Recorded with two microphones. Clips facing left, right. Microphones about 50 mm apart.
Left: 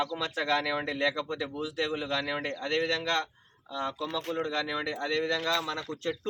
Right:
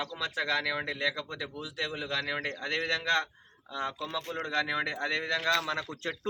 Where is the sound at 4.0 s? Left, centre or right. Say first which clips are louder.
Left 2 dB; right.